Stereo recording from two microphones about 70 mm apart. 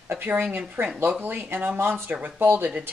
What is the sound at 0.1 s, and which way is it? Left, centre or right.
Speech, right.